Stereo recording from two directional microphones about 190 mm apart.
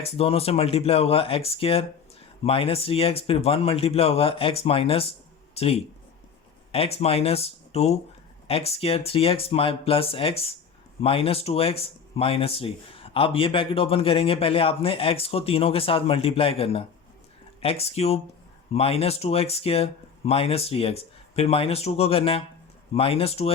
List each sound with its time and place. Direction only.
0.0 s speech: 30° left (ahead or behind)